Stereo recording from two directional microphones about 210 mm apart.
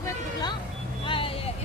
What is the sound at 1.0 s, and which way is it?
Vehicle, 25° left (ahead or behind).